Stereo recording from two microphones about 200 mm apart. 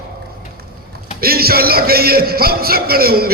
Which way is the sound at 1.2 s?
50° right (ahead or behind).